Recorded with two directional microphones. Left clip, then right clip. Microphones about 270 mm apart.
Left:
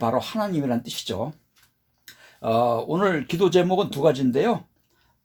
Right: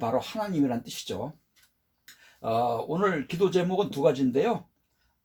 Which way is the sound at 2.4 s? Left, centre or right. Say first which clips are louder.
Left 5 dB; left.